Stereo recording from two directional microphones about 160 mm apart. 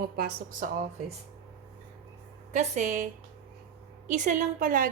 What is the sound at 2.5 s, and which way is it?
A woman's voice, 50° right (ahead or behind).